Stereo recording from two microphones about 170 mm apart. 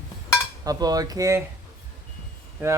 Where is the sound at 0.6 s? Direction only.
20° right (ahead or behind).